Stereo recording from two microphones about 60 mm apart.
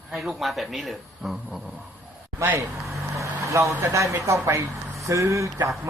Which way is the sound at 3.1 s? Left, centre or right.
Right.